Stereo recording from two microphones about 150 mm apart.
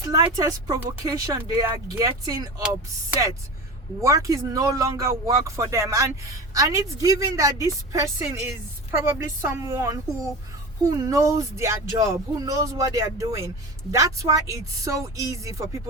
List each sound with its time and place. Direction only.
0.0 s speech: 20° right (ahead or behind)
4.0 s a woman's voice: 20° right (ahead or behind)